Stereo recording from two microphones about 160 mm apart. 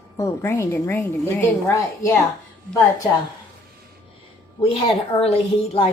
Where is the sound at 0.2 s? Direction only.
15° left (ahead or behind).